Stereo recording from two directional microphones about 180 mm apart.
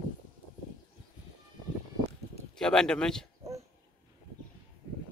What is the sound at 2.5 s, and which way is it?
Speech, 5° left (ahead or behind).